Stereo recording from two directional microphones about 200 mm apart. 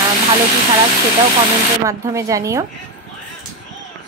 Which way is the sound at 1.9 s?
15° right (ahead or behind).